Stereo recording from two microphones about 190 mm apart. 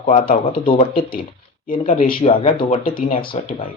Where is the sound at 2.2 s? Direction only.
30° left (ahead or behind).